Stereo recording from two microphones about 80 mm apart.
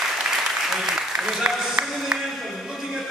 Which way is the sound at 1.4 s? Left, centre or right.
Centre.